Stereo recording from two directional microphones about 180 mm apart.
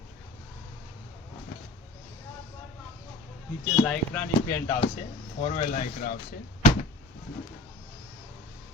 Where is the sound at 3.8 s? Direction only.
10° left (ahead or behind).